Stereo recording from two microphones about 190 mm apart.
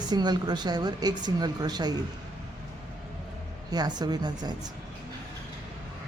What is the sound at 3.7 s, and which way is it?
Speech, 20° right (ahead or behind).